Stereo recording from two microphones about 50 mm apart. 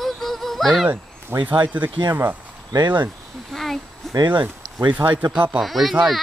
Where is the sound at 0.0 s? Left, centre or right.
Centre.